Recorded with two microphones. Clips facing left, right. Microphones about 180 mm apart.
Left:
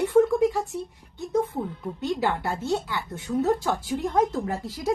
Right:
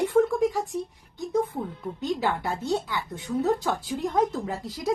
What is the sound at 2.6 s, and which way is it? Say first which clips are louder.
Speech: even; 15° right (ahead or behind).